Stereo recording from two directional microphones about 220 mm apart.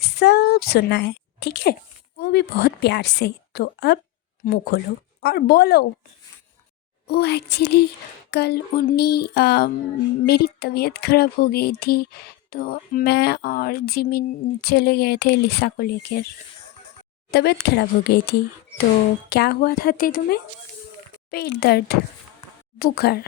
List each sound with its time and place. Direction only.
0.2 s a woman's voice: 45° left (ahead or behind)
7.1 s speech: 50° left (ahead or behind)
17.3 s speech: 50° left (ahead or behind)